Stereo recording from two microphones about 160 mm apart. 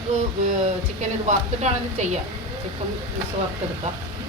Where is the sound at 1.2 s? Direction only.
45° right (ahead or behind).